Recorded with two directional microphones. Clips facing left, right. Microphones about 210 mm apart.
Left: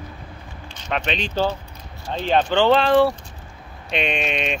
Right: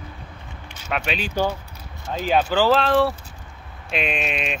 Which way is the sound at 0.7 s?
5° right (ahead or behind).